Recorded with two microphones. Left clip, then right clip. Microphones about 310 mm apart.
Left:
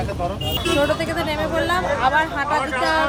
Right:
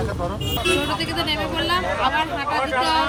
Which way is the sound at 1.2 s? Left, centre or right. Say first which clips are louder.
Left 1 dB; centre.